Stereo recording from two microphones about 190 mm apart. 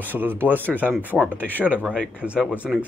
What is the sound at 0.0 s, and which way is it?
Speech, 10° right (ahead or behind).